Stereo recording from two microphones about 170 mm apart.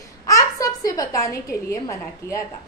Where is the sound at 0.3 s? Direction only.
20° left (ahead or behind).